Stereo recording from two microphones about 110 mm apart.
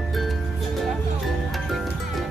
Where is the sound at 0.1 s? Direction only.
Centre (ahead or behind).